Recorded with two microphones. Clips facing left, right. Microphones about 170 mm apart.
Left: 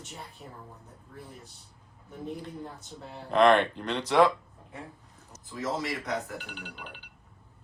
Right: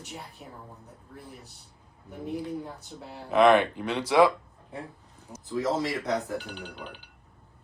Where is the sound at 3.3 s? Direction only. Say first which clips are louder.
Right 2 dB; 5° right (ahead or behind).